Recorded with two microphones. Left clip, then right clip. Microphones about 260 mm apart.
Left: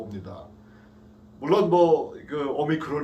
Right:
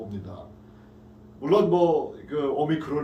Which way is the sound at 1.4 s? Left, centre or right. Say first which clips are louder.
Left 1 dB; centre.